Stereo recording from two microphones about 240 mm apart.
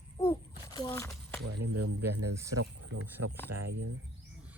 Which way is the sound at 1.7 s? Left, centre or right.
Right.